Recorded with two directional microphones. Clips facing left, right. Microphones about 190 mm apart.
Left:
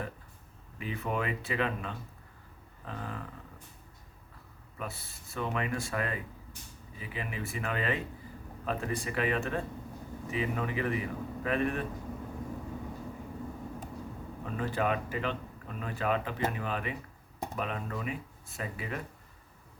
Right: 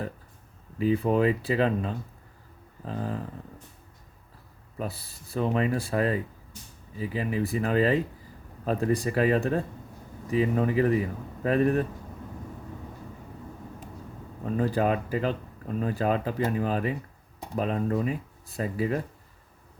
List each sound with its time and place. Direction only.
0.8 s speech: 35° right (ahead or behind)
4.8 s speech: 35° right (ahead or behind)
14.5 s speech: 35° right (ahead or behind)